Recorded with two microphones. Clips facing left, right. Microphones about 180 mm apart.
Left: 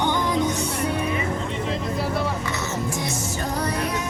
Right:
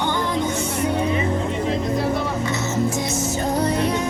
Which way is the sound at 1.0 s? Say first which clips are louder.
Right 4 dB; 30° right (ahead or behind).